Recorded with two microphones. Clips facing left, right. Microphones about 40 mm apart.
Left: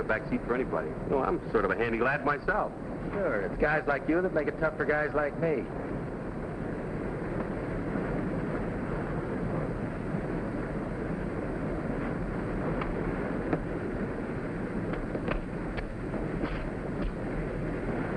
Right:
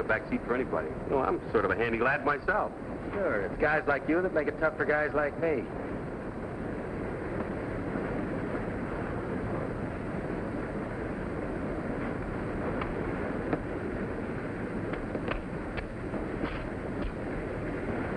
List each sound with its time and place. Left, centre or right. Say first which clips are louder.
0.1 s a man's voice: even; centre